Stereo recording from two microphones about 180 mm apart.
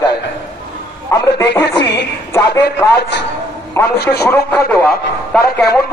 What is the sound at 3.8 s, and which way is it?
Speech, 15° left (ahead or behind).